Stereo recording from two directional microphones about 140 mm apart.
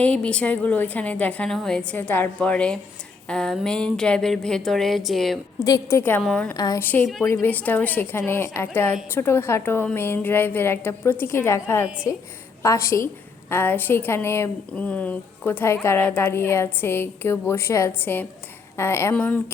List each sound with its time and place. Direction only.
0.0 s speech: 10° left (ahead or behind)
5.5 s a woman's voice: 25° left (ahead or behind)
6.0 s speech: 15° left (ahead or behind)
6.5 s a woman's voice: 20° left (ahead or behind)